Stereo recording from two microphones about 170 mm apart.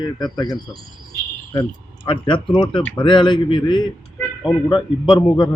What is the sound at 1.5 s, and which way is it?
Speech, 30° left (ahead or behind).